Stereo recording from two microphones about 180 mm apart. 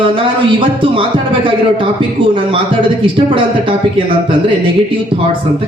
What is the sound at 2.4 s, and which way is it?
A man's voice, 30° right (ahead or behind).